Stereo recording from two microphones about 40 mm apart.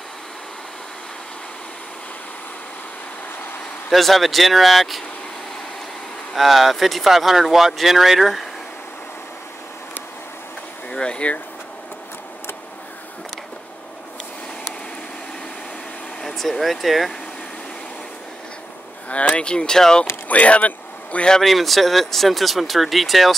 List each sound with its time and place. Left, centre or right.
3.9 s speech: centre
6.3 s speech: centre
10.9 s a sound: left
16.2 s speech: centre
19.0 s speech: left
19.5 s speech: centre
20.2 s speech: left
21.4 s speech: centre